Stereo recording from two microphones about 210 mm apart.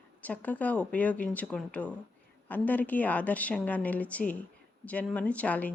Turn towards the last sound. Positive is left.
turn(degrees=5)  # may be behind; listen again after turning